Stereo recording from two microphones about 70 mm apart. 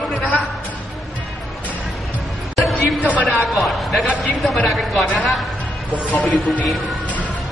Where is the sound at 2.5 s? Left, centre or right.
Centre.